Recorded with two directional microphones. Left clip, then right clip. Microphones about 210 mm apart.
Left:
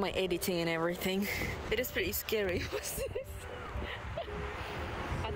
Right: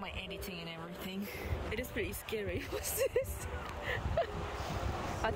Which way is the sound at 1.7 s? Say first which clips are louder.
Left 5 dB; centre (ahead or behind).